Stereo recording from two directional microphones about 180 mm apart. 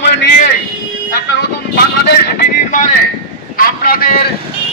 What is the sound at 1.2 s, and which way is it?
A man's voice, 65° left (ahead or behind).